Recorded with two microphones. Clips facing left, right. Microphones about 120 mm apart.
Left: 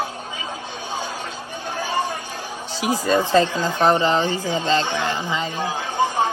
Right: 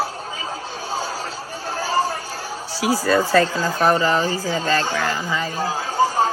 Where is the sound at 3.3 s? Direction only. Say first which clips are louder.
Even; 20° left (ahead or behind).